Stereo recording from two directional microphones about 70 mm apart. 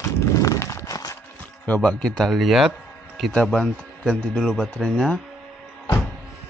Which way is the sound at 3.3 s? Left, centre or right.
Centre.